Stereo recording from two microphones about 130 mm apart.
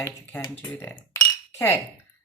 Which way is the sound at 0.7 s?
20° left (ahead or behind).